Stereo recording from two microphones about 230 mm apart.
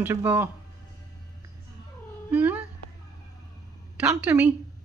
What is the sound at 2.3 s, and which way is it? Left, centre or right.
Speech, centre.